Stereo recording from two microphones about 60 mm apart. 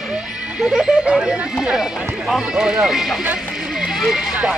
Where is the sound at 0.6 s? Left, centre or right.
Centre.